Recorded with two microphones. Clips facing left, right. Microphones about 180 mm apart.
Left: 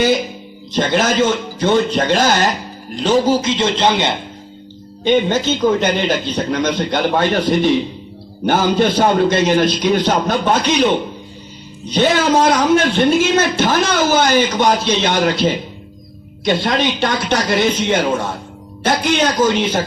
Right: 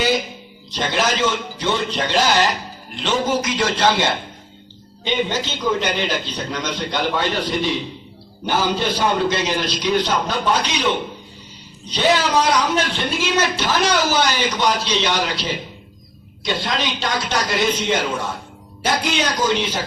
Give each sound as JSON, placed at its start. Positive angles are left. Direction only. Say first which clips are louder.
{"t": 0.7, "sound": "a man's voice", "louder": "left 5 dB", "side_deg": 50}
{"t": 5.0, "sound": "a man's voice", "louder": "left 8 dB", "side_deg": 50}
{"t": 11.9, "sound": "a man's voice", "louder": "left 4 dB", "side_deg": 50}
{"t": 19.1, "sound": "a man's voice", "louder": "left 5 dB", "side_deg": 55}